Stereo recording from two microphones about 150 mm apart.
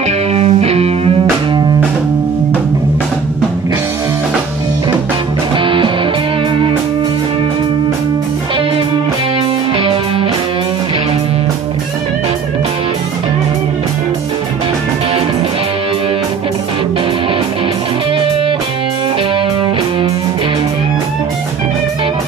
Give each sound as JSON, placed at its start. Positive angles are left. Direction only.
{"t": 0.3, "sound": "music", "side_deg": -45}
{"t": 5.6, "sound": "music", "side_deg": -35}
{"t": 9.8, "sound": "music", "side_deg": -40}